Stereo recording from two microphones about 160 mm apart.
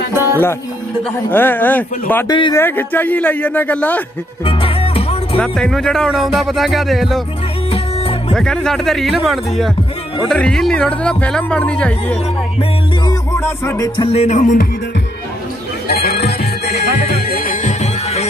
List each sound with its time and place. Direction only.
0.1 s music: 15° right (ahead or behind)
1.3 s speech: 10° left (ahead or behind)
2.2 s speech: 30° left (ahead or behind)
2.5 s speech: 10° left (ahead or behind)
4.5 s music: 35° left (ahead or behind)
5.4 s speech: 5° left (ahead or behind)
7.7 s music: 35° left (ahead or behind)
8.3 s speech: 5° left (ahead or behind)
13.0 s music: 15° left (ahead or behind)
13.9 s music: 40° left (ahead or behind)
15.9 s music: 75° left (ahead or behind)